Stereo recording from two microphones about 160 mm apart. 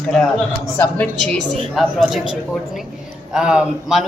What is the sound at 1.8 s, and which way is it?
Speech, centre (ahead or behind).